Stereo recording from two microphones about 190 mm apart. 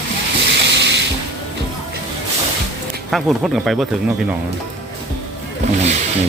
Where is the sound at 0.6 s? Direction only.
65° right (ahead or behind).